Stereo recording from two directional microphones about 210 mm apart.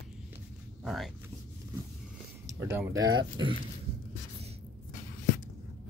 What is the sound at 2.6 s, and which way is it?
Speech, 10° right (ahead or behind).